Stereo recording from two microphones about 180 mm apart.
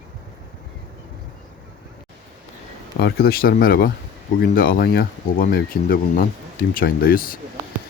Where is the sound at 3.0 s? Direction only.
65° left (ahead or behind).